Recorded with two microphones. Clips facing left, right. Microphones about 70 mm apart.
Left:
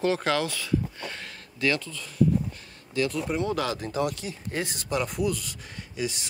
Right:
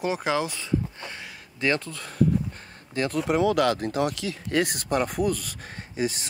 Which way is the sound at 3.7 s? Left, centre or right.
Right.